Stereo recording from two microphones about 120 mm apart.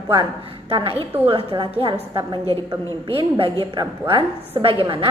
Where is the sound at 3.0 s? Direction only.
45° right (ahead or behind).